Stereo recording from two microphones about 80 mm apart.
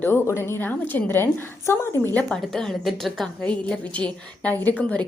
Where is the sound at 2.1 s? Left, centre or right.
Centre.